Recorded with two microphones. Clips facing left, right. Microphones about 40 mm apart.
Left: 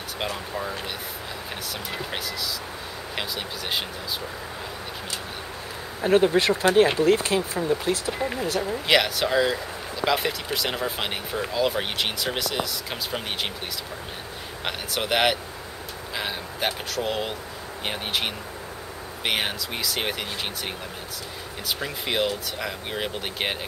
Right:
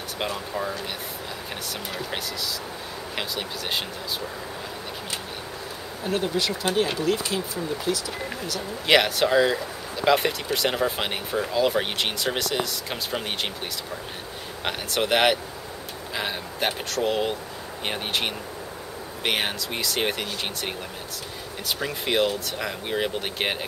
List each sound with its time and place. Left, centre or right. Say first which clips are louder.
0.2 s speech: right 1 dB; centre
1.9 s speech: even; centre
6.0 s speech: left 7 dB; left
8.1 s speech: left 5 dB; centre
8.4 s speech: left 5 dB; left
8.8 s speech: right 3 dB; centre
14.6 s speech: right 3 dB; centre